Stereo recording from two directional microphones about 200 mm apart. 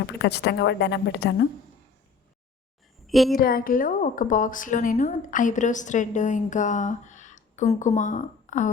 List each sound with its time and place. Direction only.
0.2 s speech: 55° left (ahead or behind)
3.1 s a woman's voice: centre (ahead or behind)
3.3 s a woman's voice: 45° left (ahead or behind)